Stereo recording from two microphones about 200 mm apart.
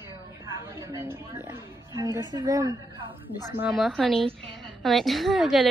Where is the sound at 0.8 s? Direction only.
10° right (ahead or behind).